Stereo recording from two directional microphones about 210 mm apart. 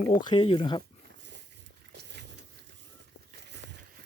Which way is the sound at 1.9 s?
55° right (ahead or behind).